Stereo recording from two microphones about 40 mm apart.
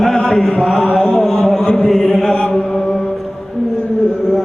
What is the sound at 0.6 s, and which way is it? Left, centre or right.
Mantra, centre.